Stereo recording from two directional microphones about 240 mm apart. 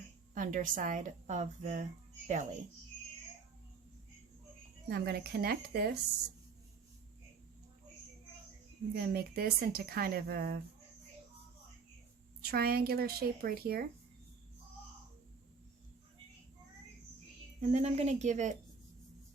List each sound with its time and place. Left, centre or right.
0.3 s a woman's voice: right
4.9 s a woman's voice: right
9.0 s a woman's voice: right
12.5 s a woman's voice: right
17.6 s speech: right